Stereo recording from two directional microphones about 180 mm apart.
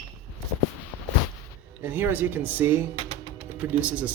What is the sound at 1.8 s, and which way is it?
Speech, 10° right (ahead or behind).